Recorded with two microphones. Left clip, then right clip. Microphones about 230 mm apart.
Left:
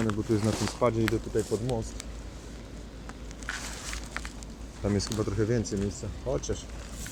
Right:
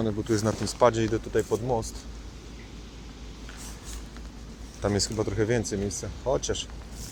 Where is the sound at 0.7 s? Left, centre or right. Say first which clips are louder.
Right 6 dB; right.